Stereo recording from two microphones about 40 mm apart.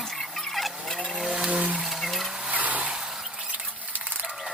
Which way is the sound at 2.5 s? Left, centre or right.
Right.